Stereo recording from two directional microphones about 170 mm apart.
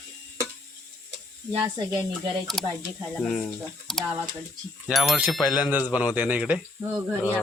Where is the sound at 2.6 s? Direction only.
Centre (ahead or behind).